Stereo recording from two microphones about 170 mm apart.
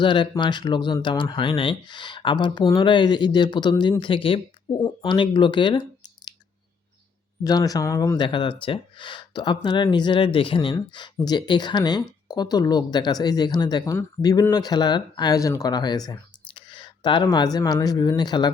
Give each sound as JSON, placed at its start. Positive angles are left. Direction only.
{"t": 0.0, "sound": "speech", "side_deg": 30}
{"t": 7.4, "sound": "speech", "side_deg": 20}